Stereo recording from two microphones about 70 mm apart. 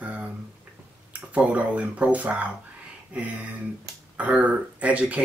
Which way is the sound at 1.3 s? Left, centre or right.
Centre.